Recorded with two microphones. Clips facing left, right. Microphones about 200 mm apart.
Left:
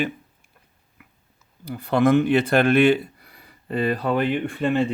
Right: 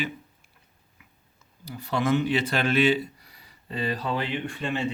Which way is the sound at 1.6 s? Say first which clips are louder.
Left 7 dB; 55° left (ahead or behind).